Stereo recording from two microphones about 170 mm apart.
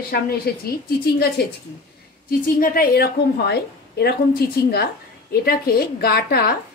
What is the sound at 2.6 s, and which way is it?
A woman's voice, 60° left (ahead or behind).